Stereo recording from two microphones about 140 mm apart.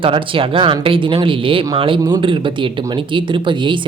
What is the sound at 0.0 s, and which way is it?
Speech, 40° right (ahead or behind).